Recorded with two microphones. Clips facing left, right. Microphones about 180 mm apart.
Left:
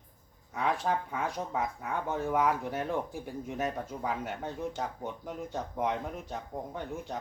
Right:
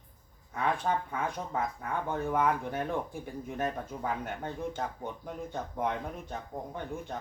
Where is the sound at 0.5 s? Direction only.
Centre (ahead or behind).